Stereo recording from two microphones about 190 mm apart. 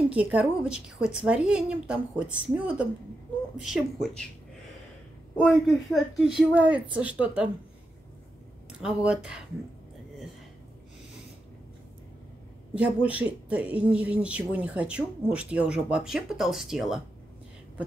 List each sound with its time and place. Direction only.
0.1 s a woman's voice: 5° right (ahead or behind)
5.3 s speech: centre (ahead or behind)
8.8 s a woman's voice: 5° right (ahead or behind)
12.7 s speech: 5° right (ahead or behind)